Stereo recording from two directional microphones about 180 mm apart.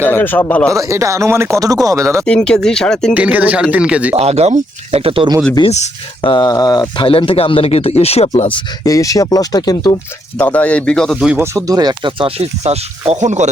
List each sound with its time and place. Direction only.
0.0 s speech: 10° left (ahead or behind)
0.7 s speech: 15° right (ahead or behind)
2.2 s speech: 5° left (ahead or behind)
3.2 s speech: 10° right (ahead or behind)
4.1 s speech: 35° right (ahead or behind)
5.5 s speech: 35° left (ahead or behind)
6.3 s speech: 20° left (ahead or behind)
10.3 s speech: 10° left (ahead or behind)
11.3 s speech: 15° right (ahead or behind); by 13.5 s 40° right (ahead or behind)